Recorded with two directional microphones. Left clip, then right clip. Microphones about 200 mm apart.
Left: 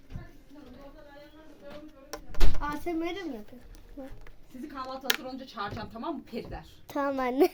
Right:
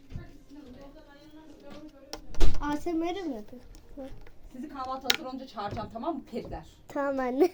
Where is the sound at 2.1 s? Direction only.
15° left (ahead or behind).